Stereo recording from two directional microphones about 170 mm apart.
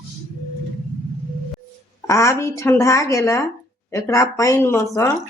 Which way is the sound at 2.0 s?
15° left (ahead or behind).